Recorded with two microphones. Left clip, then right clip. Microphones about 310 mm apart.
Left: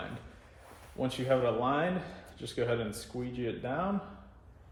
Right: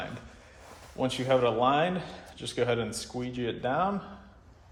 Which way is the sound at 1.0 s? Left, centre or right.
Right.